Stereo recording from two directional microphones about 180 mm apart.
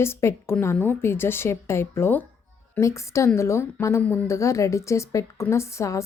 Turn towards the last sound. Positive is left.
turn(degrees=15)  # may be behind; listen again after turning